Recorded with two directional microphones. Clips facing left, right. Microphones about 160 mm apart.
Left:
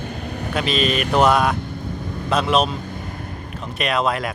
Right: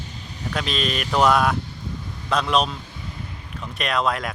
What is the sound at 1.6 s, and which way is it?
Vehicle, 55° left (ahead or behind).